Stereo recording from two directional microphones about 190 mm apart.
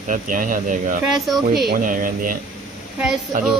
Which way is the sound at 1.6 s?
45° right (ahead or behind).